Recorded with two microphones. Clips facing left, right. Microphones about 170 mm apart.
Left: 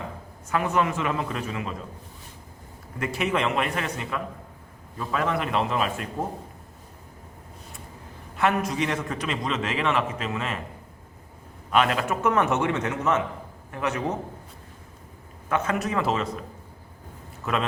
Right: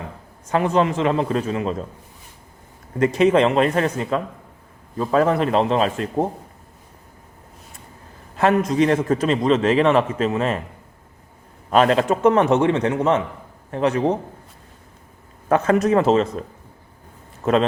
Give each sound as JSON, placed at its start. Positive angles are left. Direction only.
{"t": 0.5, "sound": "a man's voice", "side_deg": -30}
{"t": 3.2, "sound": "a man's voice", "side_deg": -35}
{"t": 8.7, "sound": "a man's voice", "side_deg": -40}
{"t": 11.7, "sound": "a man's voice", "side_deg": -35}
{"t": 15.4, "sound": "a man's voice", "side_deg": -35}
{"t": 17.4, "sound": "a man's voice", "side_deg": -35}